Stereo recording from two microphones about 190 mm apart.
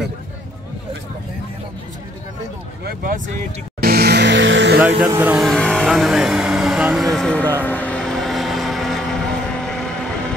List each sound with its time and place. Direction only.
2.8 s speech: 50° right (ahead or behind)
3.8 s music: 55° right (ahead or behind); by 4.7 s 75° right (ahead or behind)
5.0 s speech: 10° right (ahead or behind); by 7.5 s 5° left (ahead or behind)
7.6 s vehicle: 10° left (ahead or behind)